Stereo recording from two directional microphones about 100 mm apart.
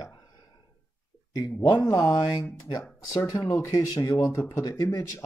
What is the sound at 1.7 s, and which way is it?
Speech, 30° left (ahead or behind).